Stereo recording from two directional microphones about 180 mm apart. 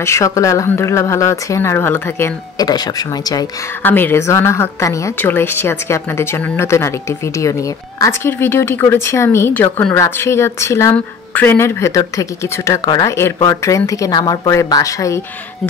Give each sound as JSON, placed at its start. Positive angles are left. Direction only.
{"t": 0.0, "sound": "speech", "side_deg": 15}